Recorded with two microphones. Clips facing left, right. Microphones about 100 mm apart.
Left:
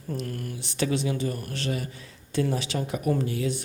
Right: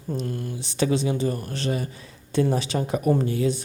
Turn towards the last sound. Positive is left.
turn(degrees=-30)  # may be behind; listen again after turning